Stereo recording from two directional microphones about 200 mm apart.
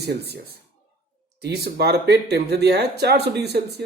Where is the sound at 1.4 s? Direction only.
55° right (ahead or behind).